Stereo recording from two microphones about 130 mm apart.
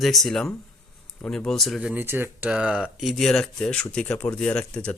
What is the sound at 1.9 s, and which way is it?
Speech, 15° right (ahead or behind).